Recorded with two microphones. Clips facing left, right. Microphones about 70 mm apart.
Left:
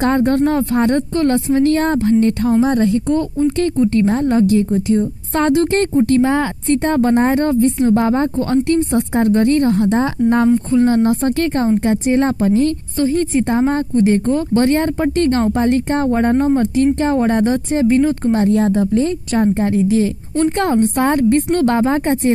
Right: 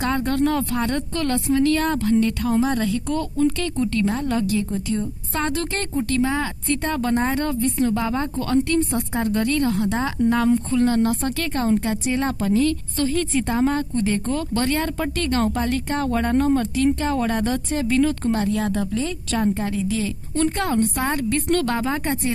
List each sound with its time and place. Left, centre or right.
0.0 s a woman's voice: left
3.7 s a woman's voice: centre
4.0 s a woman's voice: left
9.2 s a woman's voice: left